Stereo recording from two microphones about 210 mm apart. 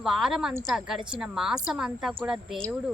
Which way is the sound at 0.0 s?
Centre (ahead or behind).